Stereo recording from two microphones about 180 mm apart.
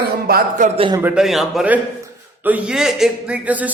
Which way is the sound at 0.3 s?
55° right (ahead or behind).